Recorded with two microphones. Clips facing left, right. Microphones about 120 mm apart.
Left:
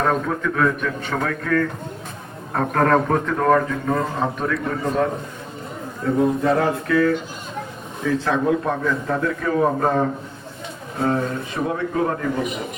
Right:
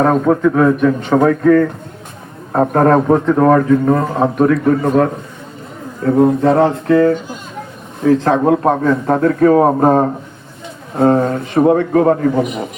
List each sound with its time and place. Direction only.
0.0 s a man's voice: 40° right (ahead or behind)
6.1 s a man's voice: 60° right (ahead or behind)
6.6 s speech: 30° right (ahead or behind)
8.2 s a man's voice: 55° right (ahead or behind)